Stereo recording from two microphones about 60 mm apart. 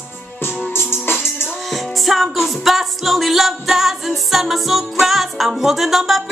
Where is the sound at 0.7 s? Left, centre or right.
Left.